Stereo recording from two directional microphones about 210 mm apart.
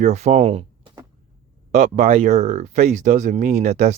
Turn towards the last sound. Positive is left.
turn(degrees=-30)  # may be behind; listen again after turning